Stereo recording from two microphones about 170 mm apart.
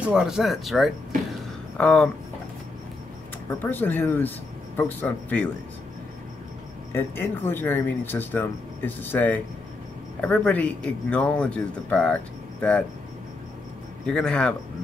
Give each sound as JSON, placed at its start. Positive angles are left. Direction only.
{"t": 0.0, "sound": "speech", "side_deg": -5}
{"t": 3.4, "sound": "speech", "side_deg": 10}
{"t": 6.9, "sound": "speech", "side_deg": 15}
{"t": 14.0, "sound": "speech", "side_deg": 5}